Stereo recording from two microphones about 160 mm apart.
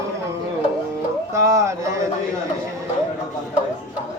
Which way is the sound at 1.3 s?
20° right (ahead or behind).